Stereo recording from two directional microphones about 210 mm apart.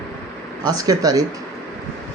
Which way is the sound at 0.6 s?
15° right (ahead or behind).